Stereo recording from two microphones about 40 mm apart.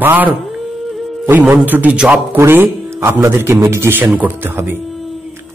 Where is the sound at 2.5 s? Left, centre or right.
Right.